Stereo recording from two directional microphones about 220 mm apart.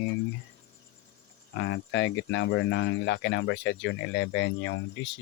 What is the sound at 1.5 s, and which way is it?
Speech, 55° left (ahead or behind).